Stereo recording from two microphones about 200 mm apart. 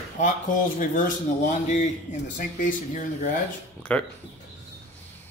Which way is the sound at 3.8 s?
5° left (ahead or behind).